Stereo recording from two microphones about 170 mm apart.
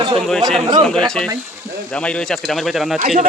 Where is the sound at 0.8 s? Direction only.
5° left (ahead or behind).